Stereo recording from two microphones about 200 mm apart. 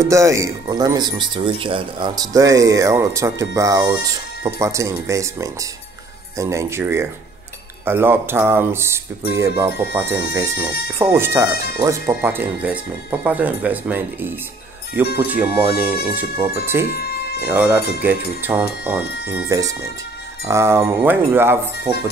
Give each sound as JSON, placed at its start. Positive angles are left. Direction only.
{"t": 0.0, "sound": "speech", "side_deg": -15}
{"t": 16.8, "sound": "music", "side_deg": 50}
{"t": 17.5, "sound": "speech", "side_deg": -10}